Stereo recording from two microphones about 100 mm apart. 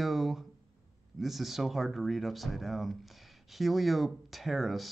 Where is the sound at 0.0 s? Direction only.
Centre (ahead or behind).